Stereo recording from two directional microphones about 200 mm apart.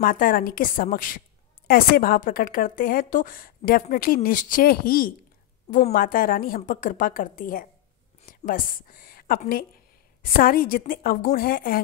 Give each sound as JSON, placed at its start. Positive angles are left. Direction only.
{"t": 0.0, "sound": "a woman's voice", "side_deg": 45}